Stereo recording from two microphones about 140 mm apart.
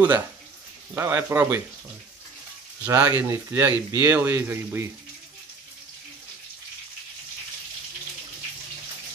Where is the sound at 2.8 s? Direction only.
25° right (ahead or behind).